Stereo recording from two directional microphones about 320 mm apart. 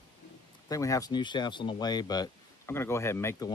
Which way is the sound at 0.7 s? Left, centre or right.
Centre.